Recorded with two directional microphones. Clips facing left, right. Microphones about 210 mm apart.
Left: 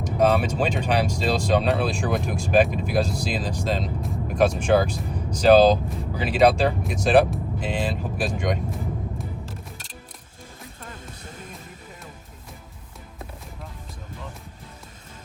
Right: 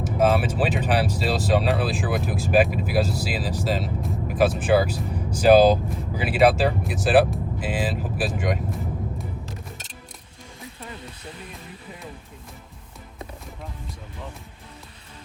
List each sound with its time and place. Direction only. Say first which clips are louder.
0.0 s speech: even; 5° right (ahead or behind)
9.1 s music: even; centre (ahead or behind)
10.8 s music: right 2 dB; 45° left (ahead or behind)